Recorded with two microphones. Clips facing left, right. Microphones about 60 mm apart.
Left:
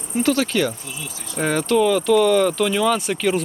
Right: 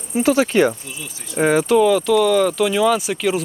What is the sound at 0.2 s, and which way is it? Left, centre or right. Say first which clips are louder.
Speech: right 4 dB; centre.